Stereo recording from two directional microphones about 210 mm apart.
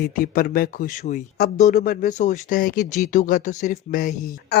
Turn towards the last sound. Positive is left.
turn(degrees=40)  # may be behind; listen again after turning